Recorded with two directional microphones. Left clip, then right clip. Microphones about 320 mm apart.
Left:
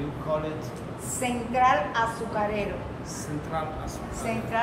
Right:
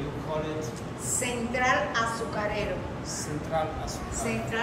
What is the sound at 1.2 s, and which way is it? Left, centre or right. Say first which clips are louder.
Speech: left 5 dB; centre.